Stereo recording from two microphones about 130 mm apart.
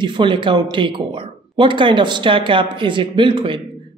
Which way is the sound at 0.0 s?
40° right (ahead or behind).